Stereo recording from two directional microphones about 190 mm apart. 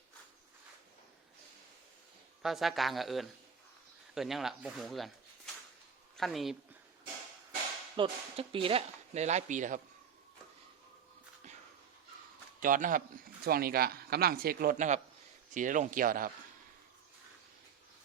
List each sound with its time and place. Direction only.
2.4 s speech: centre (ahead or behind)
6.1 s speech: centre (ahead or behind)
7.9 s speech: 30° right (ahead or behind)
12.5 s speech: 45° right (ahead or behind)